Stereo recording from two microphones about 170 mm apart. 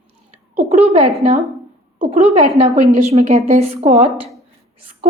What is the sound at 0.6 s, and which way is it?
Speech, 40° right (ahead or behind).